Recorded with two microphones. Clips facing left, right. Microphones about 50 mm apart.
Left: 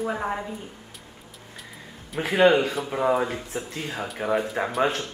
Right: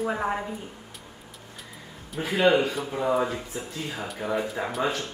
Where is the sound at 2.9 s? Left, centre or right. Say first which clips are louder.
Left 3 dB; left.